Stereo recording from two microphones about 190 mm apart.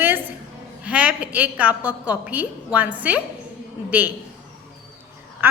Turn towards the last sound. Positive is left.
turn(degrees=-10)  # may be behind; listen again after turning